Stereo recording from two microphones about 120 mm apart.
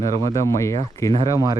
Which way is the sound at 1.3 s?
30° right (ahead or behind).